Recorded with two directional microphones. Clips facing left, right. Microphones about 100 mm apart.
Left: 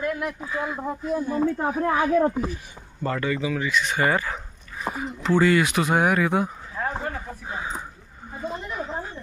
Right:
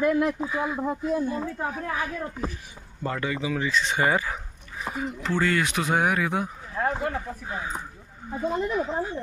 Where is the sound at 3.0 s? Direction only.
10° right (ahead or behind).